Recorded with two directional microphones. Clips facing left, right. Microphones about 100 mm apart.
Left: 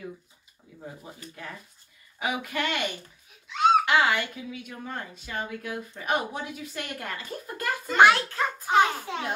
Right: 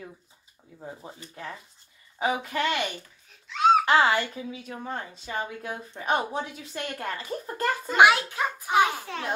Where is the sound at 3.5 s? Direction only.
Centre (ahead or behind).